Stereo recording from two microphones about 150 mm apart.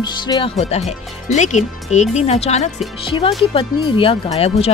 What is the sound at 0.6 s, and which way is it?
Speech, 45° left (ahead or behind).